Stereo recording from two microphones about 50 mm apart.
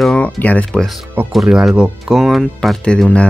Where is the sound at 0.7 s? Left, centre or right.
Centre.